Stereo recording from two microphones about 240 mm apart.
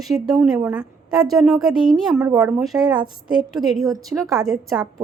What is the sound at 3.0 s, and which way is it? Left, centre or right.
A woman's voice, centre.